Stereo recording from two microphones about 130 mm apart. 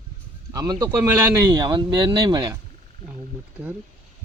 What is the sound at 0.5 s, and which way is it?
Speech, 30° right (ahead or behind).